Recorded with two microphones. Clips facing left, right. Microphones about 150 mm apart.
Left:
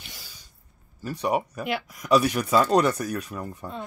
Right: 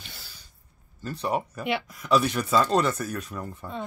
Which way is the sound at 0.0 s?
10° left (ahead or behind).